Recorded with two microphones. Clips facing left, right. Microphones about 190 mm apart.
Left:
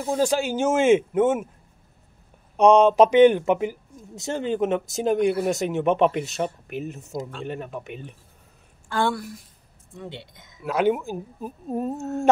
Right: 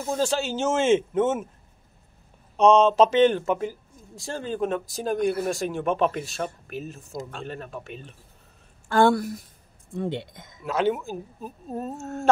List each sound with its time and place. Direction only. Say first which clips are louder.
0.0 s speech: left 3 dB; 15° left (ahead or behind)
2.5 s speech: left 2 dB; 15° left (ahead or behind)
8.8 s a woman's voice: right 5 dB; 45° right (ahead or behind)
10.6 s speech: left 2 dB; 10° left (ahead or behind)